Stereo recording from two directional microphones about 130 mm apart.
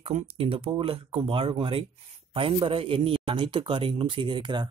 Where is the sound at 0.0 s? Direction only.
55° right (ahead or behind).